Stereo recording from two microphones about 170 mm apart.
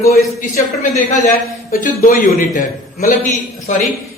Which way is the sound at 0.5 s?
45° left (ahead or behind).